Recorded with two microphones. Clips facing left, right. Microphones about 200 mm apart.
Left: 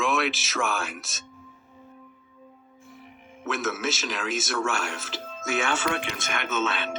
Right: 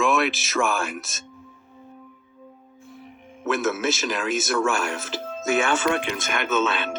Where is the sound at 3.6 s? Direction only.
50° right (ahead or behind).